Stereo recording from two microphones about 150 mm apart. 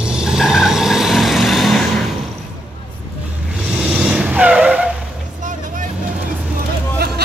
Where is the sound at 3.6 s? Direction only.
5° right (ahead or behind).